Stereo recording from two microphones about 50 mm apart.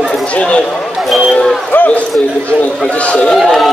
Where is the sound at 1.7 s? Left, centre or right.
Left.